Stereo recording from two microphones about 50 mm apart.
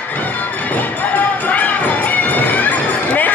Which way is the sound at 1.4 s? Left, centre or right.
Left.